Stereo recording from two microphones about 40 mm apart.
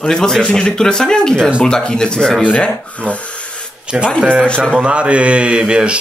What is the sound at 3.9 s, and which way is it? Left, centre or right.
Speech, right.